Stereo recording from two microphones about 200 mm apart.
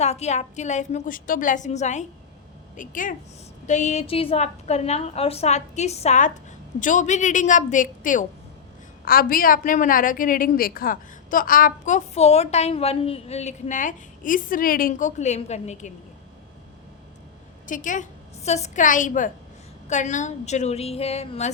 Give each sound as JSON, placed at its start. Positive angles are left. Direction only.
{"t": 0.0, "sound": "a woman's voice", "side_deg": 35}
{"t": 17.7, "sound": "a woman's voice", "side_deg": 40}